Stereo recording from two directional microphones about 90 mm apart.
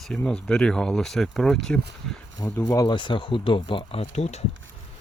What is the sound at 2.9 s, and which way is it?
Speech, 65° left (ahead or behind).